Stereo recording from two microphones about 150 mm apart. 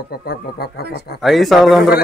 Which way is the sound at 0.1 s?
90° left.